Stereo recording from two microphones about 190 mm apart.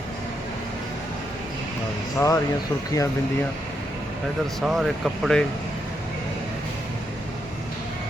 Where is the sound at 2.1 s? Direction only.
15° left (ahead or behind).